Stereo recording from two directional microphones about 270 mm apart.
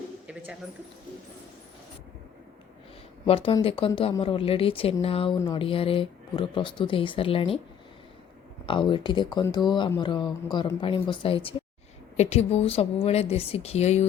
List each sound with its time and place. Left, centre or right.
3.2 s speech: centre
8.6 s speech: centre